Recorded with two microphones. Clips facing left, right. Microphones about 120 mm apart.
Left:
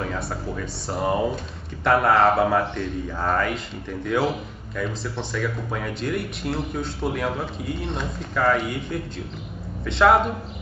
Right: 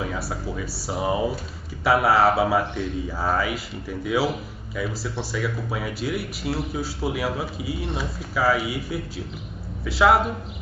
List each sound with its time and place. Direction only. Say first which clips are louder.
0.0 s speech: even; 5° right (ahead or behind)